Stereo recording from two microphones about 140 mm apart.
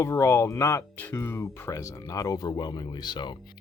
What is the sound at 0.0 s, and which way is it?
Speech, 20° left (ahead or behind).